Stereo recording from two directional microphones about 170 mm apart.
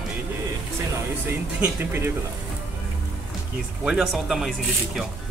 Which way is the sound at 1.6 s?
10° right (ahead or behind).